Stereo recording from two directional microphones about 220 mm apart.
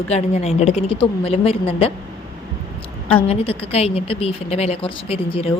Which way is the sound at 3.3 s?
25° left (ahead or behind).